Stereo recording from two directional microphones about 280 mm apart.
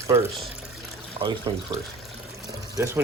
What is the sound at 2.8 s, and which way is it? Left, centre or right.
Speech, centre.